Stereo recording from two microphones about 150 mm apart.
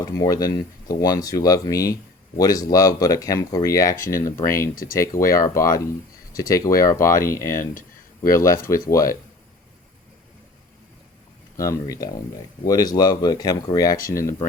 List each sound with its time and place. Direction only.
0.0 s speech: 25° left (ahead or behind)
4.7 s speech: 70° left (ahead or behind)
4.9 s speech: 20° left (ahead or behind)
7.6 s a sound: 65° left (ahead or behind)
8.3 s speech: 20° left (ahead or behind)
11.5 s speech: 20° left (ahead or behind)